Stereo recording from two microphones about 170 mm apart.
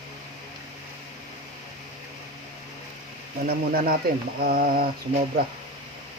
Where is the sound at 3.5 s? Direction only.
65° right (ahead or behind).